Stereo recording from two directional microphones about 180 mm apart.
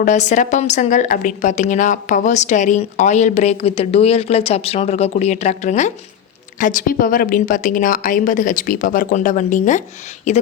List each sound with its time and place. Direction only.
0.0 s a woman's voice: 40° left (ahead or behind)